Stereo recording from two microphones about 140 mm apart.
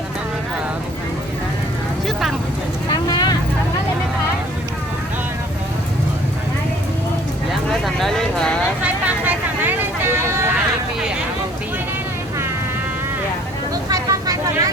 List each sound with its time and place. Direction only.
2.9 s vehicle: 30° left (ahead or behind)
7.7 s vehicle: centre (ahead or behind)
8.8 s vehicle: 10° right (ahead or behind)
13.9 s vehicle: 25° right (ahead or behind)